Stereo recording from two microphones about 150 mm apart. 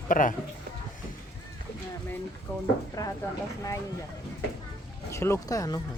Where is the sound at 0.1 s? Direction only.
60° left (ahead or behind).